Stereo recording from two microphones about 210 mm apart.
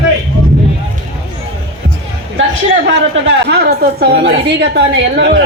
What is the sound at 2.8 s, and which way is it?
A woman's voice, 55° right (ahead or behind).